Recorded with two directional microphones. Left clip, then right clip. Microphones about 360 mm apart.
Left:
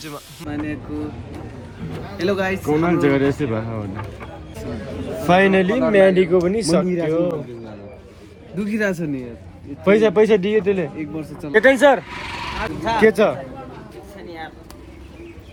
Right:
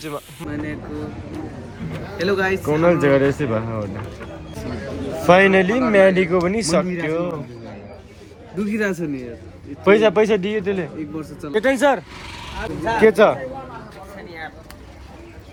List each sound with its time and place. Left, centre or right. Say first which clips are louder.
0.0 s speech: right 3 dB; centre
2.1 s speech: right 1 dB; centre
5.2 s speech: right 2 dB; centre
8.7 s speech: left 1 dB; centre
9.8 s speech: even; centre